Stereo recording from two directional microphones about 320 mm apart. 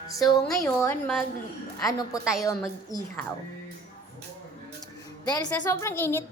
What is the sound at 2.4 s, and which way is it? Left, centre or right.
Speech, centre.